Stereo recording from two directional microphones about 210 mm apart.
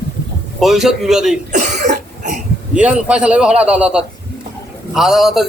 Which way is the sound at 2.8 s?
5° right (ahead or behind).